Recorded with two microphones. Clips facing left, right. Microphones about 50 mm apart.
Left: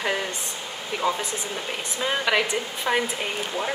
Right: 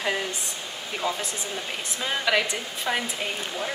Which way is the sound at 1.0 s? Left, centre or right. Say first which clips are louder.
Left 3 dB; centre.